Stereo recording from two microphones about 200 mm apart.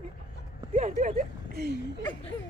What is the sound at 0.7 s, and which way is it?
A woman's voice, 40° right (ahead or behind).